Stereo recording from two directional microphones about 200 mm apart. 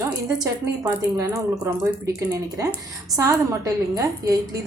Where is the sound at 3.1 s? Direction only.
15° right (ahead or behind).